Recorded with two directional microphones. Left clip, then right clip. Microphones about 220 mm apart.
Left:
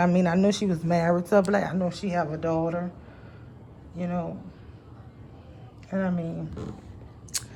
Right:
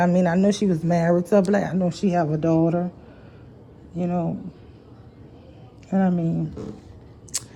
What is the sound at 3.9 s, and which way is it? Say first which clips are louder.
Speech: right 5 dB; 15° left (ahead or behind).